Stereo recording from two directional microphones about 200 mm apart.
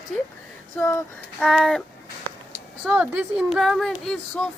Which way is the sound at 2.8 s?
5° right (ahead or behind).